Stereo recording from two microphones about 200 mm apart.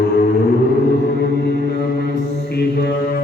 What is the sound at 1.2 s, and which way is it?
Mantra, 55° left (ahead or behind).